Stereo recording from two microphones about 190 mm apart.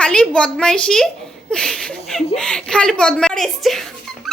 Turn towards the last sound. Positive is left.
turn(degrees=0)  # may be behind; listen again after turning